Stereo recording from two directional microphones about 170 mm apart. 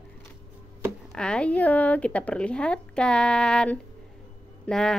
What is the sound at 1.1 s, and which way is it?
A woman's voice, 5° left (ahead or behind).